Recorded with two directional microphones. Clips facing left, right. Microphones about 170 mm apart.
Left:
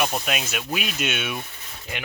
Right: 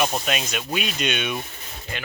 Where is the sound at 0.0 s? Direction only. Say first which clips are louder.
Right 1 dB; 5° left (ahead or behind).